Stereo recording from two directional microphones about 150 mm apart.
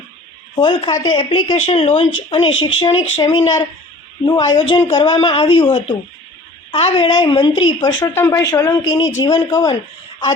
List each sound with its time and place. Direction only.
0.5 s speech: 35° left (ahead or behind)
8.1 s a man's voice: 20° left (ahead or behind)